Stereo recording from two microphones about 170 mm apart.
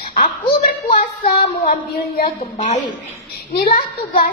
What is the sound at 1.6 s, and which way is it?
Speech, 60° left (ahead or behind).